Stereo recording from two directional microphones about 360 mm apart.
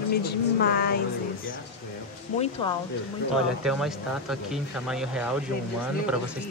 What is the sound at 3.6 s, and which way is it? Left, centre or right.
Speech, centre.